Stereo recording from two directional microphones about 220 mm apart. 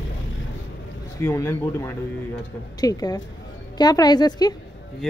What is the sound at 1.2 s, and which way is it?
Speech, 10° left (ahead or behind).